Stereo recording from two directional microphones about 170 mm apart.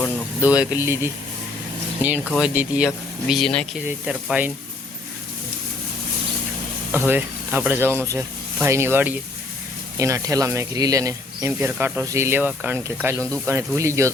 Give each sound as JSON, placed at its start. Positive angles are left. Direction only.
{"t": 0.4, "sound": "speech", "side_deg": -10}
{"t": 3.8, "sound": "speech", "side_deg": -10}
{"t": 6.9, "sound": "speech", "side_deg": -10}